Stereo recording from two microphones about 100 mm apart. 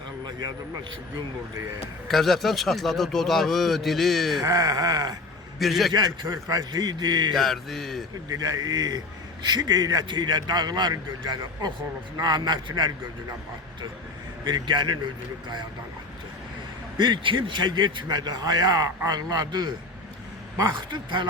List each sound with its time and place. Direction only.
0.3 s a sound: 40° right (ahead or behind)
2.0 s a man's voice: centre (ahead or behind)
4.4 s a man's voice: 35° right (ahead or behind)
5.5 s a man's voice: centre (ahead or behind)
5.9 s a man's voice: 45° right (ahead or behind)
6.2 s a man's voice: 30° right (ahead or behind)
7.3 s a man's voice: centre (ahead or behind)
8.3 s a man's voice: 40° right (ahead or behind)
14.4 s a man's voice: 45° right (ahead or behind)
17.0 s a man's voice: 55° right (ahead or behind)